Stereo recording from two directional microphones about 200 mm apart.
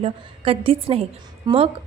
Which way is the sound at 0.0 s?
30° right (ahead or behind).